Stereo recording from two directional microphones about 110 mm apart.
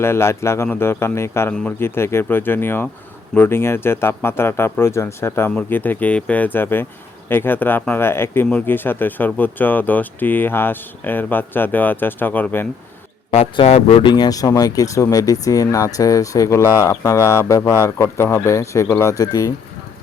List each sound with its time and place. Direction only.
0.0 s speech: 25° left (ahead or behind)
13.3 s speech: 70° left (ahead or behind)
14.1 s speech: 35° left (ahead or behind)